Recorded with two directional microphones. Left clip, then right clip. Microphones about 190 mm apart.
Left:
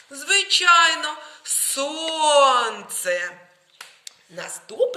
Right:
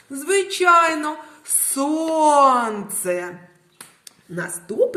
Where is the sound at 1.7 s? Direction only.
30° right (ahead or behind).